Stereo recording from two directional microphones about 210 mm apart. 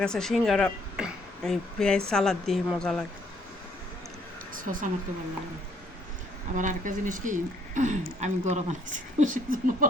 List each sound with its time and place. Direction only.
0.0 s a woman's voice: 5° left (ahead or behind)
4.5 s speech: 40° right (ahead or behind)
6.6 s speech: 40° right (ahead or behind)